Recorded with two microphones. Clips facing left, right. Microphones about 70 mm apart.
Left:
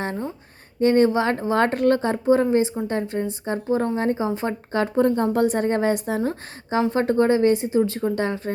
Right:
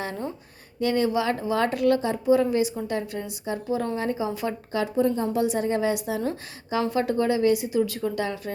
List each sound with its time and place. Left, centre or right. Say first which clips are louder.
0.8 s a woman's voice: left 6 dB; left